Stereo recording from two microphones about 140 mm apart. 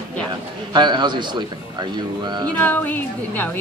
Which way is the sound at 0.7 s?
30° right (ahead or behind).